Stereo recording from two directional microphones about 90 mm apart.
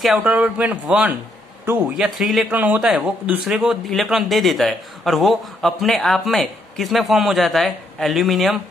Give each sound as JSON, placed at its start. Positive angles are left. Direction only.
{"t": 0.0, "sound": "speech", "side_deg": -10}
{"t": 1.8, "sound": "a man's voice", "side_deg": 0}
{"t": 2.5, "sound": "speech", "side_deg": -20}
{"t": 3.9, "sound": "a man's voice", "side_deg": 0}